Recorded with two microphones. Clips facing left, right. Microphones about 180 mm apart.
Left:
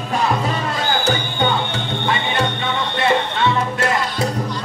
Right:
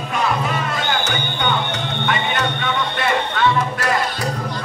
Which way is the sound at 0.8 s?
35° left (ahead or behind).